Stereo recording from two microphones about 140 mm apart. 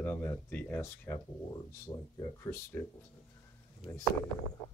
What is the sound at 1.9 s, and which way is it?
Speech, 30° left (ahead or behind).